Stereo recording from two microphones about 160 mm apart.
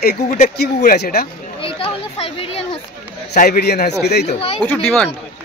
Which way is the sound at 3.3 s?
80° left.